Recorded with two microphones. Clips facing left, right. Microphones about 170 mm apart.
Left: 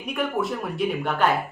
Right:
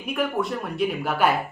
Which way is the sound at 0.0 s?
Centre (ahead or behind).